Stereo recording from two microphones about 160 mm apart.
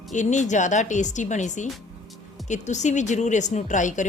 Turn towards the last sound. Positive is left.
turn(degrees=50)  # may be behind; listen again after turning